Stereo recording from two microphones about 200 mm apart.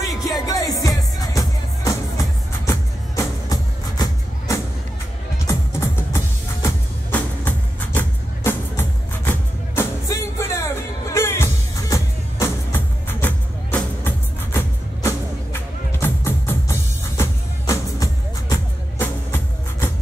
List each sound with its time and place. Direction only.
0.0 s music: 15° left (ahead or behind)
16.0 s music: 10° left (ahead or behind)